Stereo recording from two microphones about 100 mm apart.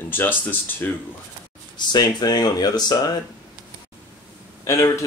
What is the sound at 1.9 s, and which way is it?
Speech, 45° left (ahead or behind).